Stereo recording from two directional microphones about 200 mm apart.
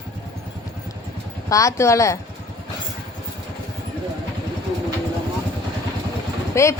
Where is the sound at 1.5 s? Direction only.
15° left (ahead or behind).